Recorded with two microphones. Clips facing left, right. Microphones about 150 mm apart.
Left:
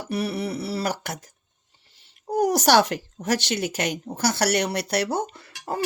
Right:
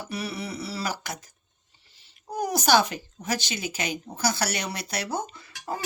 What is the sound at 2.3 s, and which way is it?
Speech, 75° left (ahead or behind).